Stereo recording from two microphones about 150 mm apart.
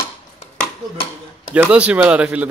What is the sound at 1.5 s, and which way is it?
Speech, 10° right (ahead or behind).